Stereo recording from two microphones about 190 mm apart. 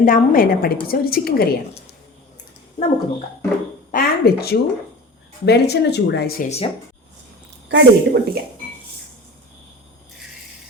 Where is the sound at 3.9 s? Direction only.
55° left (ahead or behind).